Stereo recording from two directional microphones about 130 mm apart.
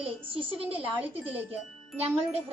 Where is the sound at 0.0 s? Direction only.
45° right (ahead or behind).